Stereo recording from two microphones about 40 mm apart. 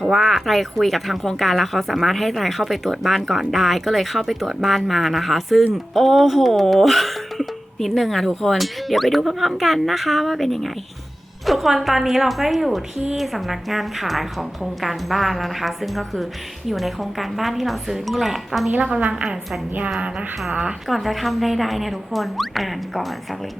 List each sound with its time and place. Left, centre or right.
0.0 s speech: centre
18.7 s a woman's voice: right
19.1 s a woman's voice: centre
20.5 s speech: right
20.8 s speech: centre